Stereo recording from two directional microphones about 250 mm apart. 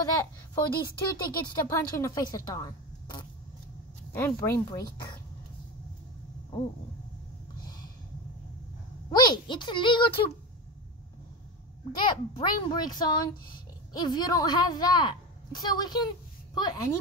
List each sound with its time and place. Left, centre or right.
0.0 s a child's voice: centre
9.1 s speech: centre
11.9 s a child's voice: centre